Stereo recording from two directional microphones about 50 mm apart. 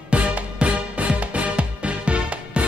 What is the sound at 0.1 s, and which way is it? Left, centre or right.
Music, right.